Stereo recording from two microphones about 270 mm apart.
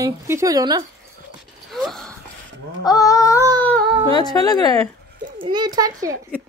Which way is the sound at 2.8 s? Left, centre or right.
Centre.